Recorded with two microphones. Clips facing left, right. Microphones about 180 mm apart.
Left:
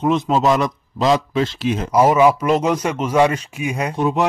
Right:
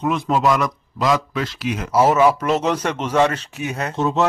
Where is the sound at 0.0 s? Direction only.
20° left (ahead or behind).